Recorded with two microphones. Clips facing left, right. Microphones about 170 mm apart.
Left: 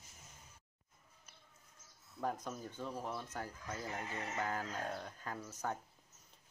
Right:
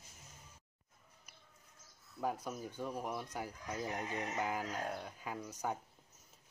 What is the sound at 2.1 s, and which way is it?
Speech, 10° right (ahead or behind).